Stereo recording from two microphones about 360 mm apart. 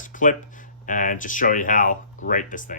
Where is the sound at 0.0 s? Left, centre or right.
Left.